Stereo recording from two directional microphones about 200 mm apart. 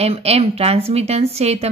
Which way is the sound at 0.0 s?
30° right (ahead or behind).